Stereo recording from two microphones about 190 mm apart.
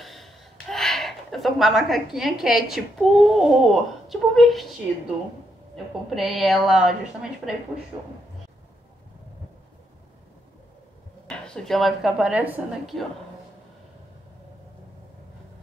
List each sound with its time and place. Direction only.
0.0 s a woman's voice: centre (ahead or behind)
6.0 s a woman's voice: centre (ahead or behind)
7.9 s speech: 20° right (ahead or behind)
11.2 s a woman's voice: 5° left (ahead or behind)